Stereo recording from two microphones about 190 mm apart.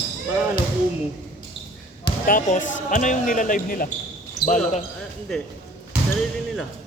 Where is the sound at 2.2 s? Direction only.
45° left (ahead or behind).